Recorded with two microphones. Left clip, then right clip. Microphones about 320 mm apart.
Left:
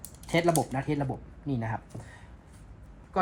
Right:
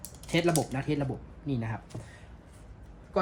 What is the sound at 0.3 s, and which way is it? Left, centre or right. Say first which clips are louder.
Speech: left 2 dB; centre.